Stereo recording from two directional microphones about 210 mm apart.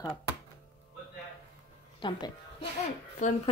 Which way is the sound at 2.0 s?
20° left (ahead or behind).